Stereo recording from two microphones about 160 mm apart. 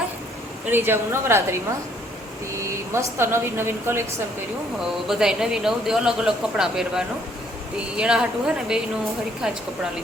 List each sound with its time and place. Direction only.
0.7 s speech: 15° right (ahead or behind)
2.6 s speech: 20° right (ahead or behind)
5.0 s speech: 5° right (ahead or behind)